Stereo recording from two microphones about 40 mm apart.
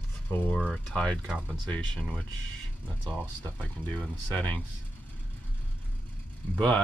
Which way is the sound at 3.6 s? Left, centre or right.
Left.